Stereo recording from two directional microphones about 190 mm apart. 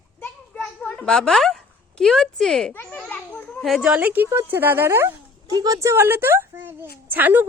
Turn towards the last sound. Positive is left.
turn(degrees=-10)  # may be behind; listen again after turning